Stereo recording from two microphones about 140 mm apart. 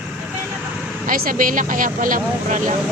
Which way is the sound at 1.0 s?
75° right (ahead or behind).